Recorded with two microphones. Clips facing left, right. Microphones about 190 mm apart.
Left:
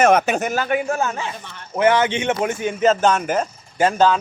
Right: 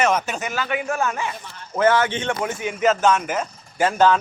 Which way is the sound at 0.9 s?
25° left (ahead or behind).